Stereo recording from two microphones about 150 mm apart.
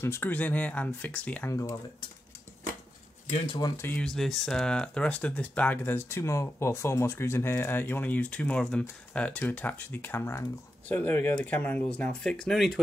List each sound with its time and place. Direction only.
0.0 s speech: 15° left (ahead or behind)
1.5 s speech: 20° left (ahead or behind)
3.7 s speech: 10° left (ahead or behind)